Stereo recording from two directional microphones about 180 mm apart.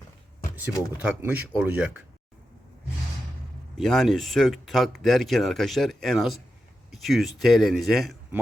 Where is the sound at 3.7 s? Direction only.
Centre (ahead or behind).